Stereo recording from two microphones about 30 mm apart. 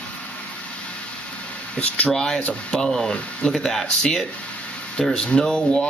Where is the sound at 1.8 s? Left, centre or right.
Left.